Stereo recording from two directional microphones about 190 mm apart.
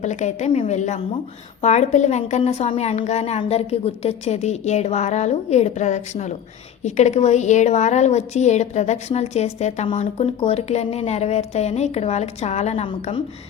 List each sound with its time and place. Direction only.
0.0 s a woman's voice: 40° left (ahead or behind)